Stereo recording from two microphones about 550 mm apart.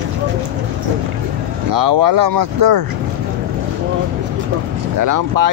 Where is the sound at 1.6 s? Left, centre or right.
Right.